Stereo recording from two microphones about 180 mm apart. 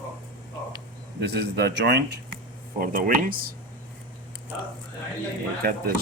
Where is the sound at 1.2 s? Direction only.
65° right (ahead or behind).